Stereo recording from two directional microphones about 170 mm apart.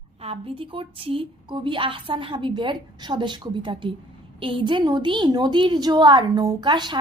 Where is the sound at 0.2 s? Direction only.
35° right (ahead or behind).